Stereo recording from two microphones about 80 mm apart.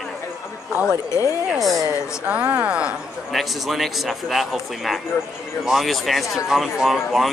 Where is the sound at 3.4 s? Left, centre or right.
Centre.